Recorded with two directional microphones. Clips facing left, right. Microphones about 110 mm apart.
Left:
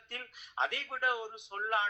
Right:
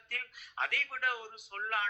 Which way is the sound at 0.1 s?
25° left (ahead or behind).